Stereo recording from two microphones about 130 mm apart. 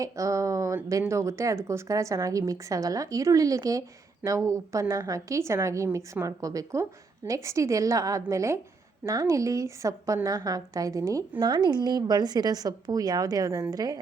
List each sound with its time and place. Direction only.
0.0 s speech: 25° right (ahead or behind)